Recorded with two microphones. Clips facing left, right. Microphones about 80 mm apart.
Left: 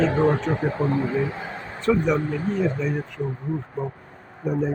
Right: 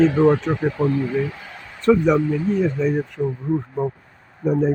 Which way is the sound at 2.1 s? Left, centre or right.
Left.